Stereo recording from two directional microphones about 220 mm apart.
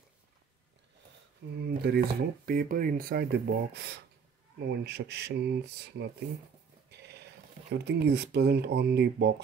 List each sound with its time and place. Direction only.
1.6 s speech: 45° right (ahead or behind)
7.7 s speech: 50° right (ahead or behind)